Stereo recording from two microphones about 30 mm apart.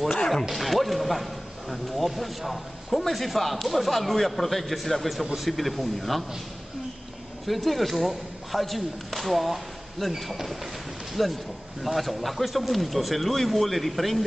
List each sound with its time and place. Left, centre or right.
0.3 s speech: centre
7.4 s speech: centre